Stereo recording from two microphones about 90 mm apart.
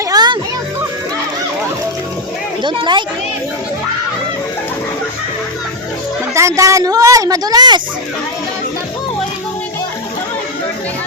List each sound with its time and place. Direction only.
0.1 s music: 50° right (ahead or behind)
2.6 s a woman's voice: 60° right (ahead or behind)
6.3 s a woman's voice: 35° right (ahead or behind)